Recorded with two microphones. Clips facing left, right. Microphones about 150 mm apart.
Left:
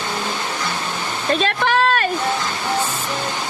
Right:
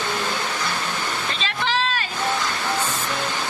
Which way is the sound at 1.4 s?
55° left (ahead or behind).